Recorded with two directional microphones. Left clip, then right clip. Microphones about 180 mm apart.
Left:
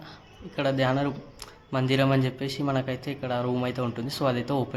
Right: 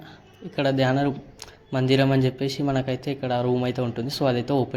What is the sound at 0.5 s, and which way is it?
Speech, 15° right (ahead or behind).